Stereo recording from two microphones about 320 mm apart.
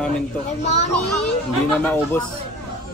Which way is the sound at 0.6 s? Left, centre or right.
Left.